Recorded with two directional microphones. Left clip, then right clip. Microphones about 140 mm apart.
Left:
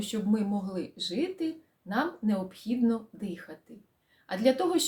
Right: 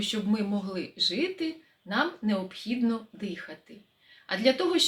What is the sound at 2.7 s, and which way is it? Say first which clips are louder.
Speech: left 1 dB; 20° right (ahead or behind).